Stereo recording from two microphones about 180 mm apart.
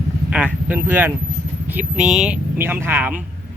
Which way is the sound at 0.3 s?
10° right (ahead or behind).